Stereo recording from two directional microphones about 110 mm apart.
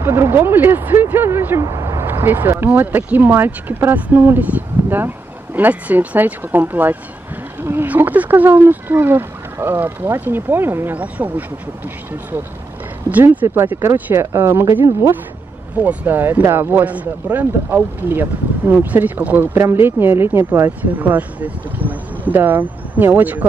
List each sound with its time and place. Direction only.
0.0 s speech: 25° right (ahead or behind)
13.1 s speech: 15° right (ahead or behind)
15.7 s speech: 10° right (ahead or behind)